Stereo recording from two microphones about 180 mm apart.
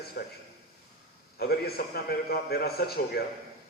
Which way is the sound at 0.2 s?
50° left (ahead or behind).